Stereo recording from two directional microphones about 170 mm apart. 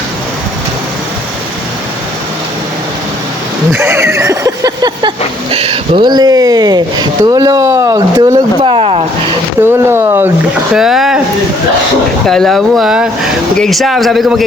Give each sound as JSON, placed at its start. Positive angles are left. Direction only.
{"t": 3.7, "sound": "a sound", "side_deg": -15}
{"t": 5.5, "sound": "speech", "side_deg": -35}
{"t": 8.6, "sound": "a sound", "side_deg": -30}
{"t": 9.6, "sound": "speech", "side_deg": -15}
{"t": 10.8, "sound": "speech", "side_deg": 0}
{"t": 12.3, "sound": "speech", "side_deg": 0}